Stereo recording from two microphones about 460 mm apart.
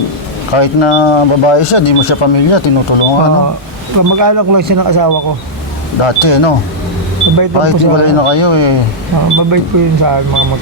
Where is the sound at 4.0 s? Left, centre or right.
Right.